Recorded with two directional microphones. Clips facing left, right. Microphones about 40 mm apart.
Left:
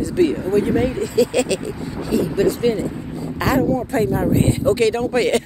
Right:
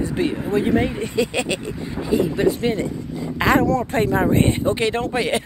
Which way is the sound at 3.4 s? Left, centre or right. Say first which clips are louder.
Right 2 dB; right.